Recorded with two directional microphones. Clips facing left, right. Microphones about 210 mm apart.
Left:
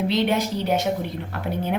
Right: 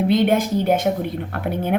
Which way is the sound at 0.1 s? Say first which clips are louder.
Right 5 dB; 50° right (ahead or behind).